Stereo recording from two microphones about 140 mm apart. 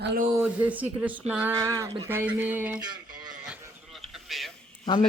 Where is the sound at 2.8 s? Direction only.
30° right (ahead or behind).